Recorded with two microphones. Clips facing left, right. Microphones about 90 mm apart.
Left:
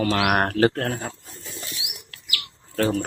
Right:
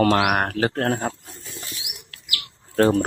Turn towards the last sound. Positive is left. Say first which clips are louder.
# right 5 dB
turn(degrees=-40)  # may be behind; listen again after turning